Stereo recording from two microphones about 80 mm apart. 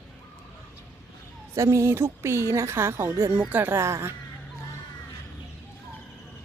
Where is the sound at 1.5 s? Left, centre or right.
Right.